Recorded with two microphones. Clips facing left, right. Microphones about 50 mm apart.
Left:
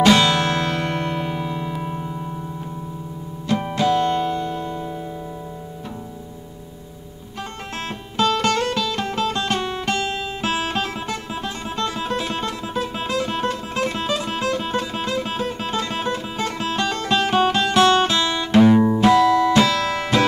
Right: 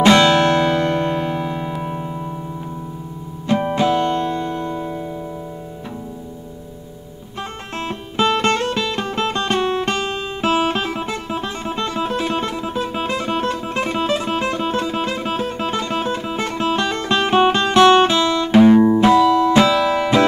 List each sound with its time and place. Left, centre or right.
0.0 s music: right
0.7 s music: centre
3.4 s music: right
4.1 s music: centre
7.7 s music: centre
8.7 s music: right
10.4 s music: centre
18.1 s music: centre